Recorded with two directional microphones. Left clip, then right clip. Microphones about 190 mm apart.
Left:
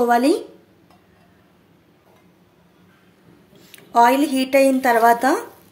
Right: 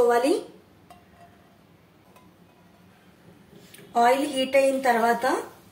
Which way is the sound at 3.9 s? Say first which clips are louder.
Left 6 dB; 65° left (ahead or behind).